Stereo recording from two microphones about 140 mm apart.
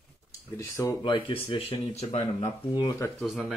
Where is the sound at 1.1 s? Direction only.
35° left (ahead or behind).